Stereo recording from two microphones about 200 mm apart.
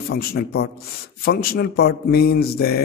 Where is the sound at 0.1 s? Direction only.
50° left (ahead or behind).